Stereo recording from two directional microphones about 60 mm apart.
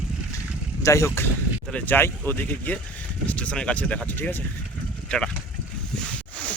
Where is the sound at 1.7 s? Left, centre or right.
Left.